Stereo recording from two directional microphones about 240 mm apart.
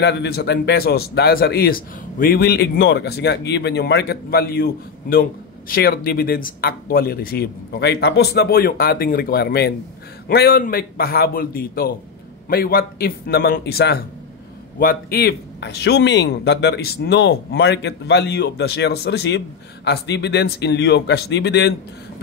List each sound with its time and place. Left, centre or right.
0.0 s speech: left